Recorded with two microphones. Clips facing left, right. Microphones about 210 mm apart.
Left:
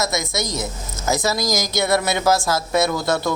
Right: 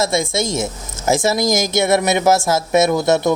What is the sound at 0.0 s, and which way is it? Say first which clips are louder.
Speech: right 5 dB; 30° right (ahead or behind).